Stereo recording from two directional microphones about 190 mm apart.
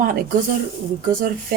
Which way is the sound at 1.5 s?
50° right (ahead or behind).